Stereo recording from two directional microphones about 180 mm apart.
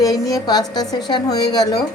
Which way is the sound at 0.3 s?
20° left (ahead or behind).